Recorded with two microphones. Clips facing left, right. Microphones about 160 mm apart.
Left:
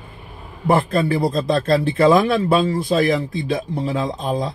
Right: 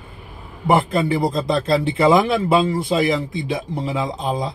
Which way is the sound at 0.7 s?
15° right (ahead or behind).